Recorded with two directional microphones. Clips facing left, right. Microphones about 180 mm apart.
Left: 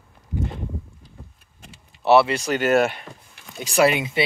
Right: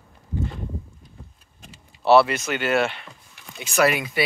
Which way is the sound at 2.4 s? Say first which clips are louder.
Left 4 dB; 40° left (ahead or behind).